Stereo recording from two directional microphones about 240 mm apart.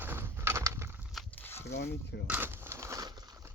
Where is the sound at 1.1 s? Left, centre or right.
Centre.